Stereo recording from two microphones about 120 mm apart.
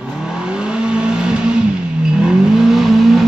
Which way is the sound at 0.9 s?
5° right (ahead or behind).